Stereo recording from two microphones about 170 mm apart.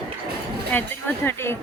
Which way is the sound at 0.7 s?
10° left (ahead or behind).